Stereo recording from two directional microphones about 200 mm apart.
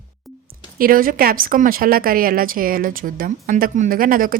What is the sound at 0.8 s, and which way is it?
A woman's voice, 45° right (ahead or behind).